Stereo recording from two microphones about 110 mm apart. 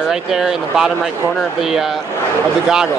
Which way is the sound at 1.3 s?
5° left (ahead or behind).